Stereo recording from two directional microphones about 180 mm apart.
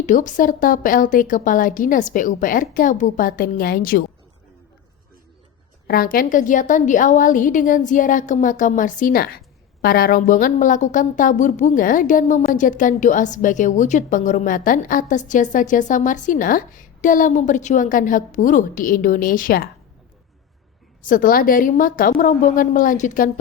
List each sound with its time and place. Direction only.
0.0 s a woman's voice: 45° left (ahead or behind)
5.9 s a woman's voice: 55° left (ahead or behind)
21.0 s a woman's voice: 50° left (ahead or behind)